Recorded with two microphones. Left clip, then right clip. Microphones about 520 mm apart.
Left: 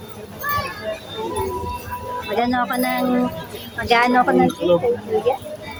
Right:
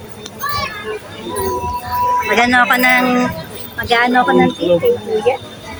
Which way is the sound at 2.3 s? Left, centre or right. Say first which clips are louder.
Right 7 dB; left.